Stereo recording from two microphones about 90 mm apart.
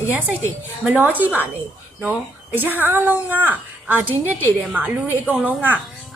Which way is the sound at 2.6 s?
20° right (ahead or behind).